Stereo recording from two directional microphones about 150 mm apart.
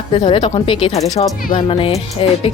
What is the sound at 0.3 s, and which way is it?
Speech, 35° left (ahead or behind).